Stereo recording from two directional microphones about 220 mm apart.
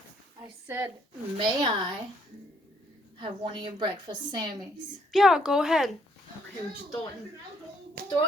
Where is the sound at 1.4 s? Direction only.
20° right (ahead or behind).